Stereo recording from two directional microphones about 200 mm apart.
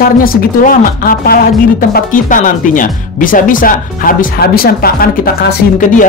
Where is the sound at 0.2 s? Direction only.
45° left (ahead or behind).